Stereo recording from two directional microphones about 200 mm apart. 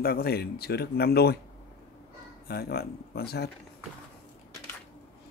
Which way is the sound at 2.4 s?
50° left (ahead or behind).